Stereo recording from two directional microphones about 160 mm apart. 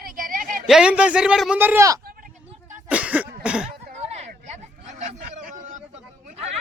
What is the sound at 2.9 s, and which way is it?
Cough, 10° right (ahead or behind).